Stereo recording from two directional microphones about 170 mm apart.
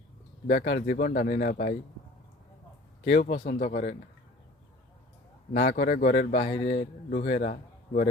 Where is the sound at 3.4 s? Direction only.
65° left (ahead or behind).